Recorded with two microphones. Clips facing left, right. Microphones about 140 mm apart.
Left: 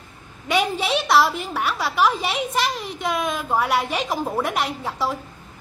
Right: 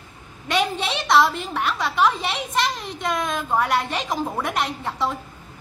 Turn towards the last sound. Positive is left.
turn(degrees=5)  # may be behind; listen again after turning